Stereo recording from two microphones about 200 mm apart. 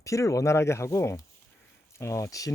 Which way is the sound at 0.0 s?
15° left (ahead or behind).